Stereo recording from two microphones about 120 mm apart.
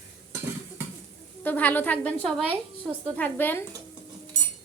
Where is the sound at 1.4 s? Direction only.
15° left (ahead or behind).